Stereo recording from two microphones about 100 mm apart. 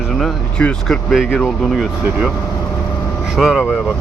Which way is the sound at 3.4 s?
5° right (ahead or behind).